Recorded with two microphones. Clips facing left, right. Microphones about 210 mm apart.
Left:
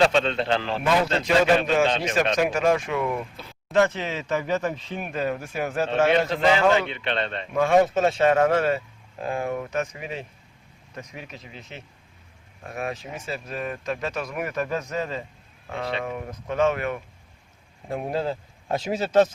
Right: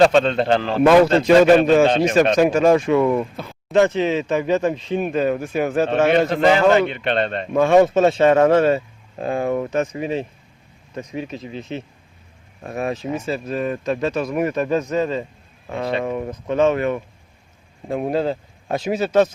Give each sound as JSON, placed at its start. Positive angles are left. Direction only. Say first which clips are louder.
{"t": 0.0, "sound": "a man's voice", "louder": "right 6 dB", "side_deg": -45}
{"t": 2.3, "sound": "speech", "louder": "right 7 dB", "side_deg": -30}
{"t": 3.3, "sound": "speech", "louder": "right 9 dB", "side_deg": -55}
{"t": 3.7, "sound": "speech", "louder": "right 6 dB", "side_deg": -20}
{"t": 6.1, "sound": "a man's voice", "louder": "right 5 dB", "side_deg": -55}
{"t": 7.5, "sound": "speech", "louder": "right 5 dB", "side_deg": -30}
{"t": 18.8, "sound": "a man's voice", "louder": "right 3 dB", "side_deg": -15}